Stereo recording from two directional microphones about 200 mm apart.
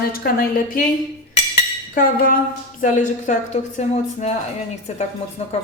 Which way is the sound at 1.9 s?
45° left (ahead or behind).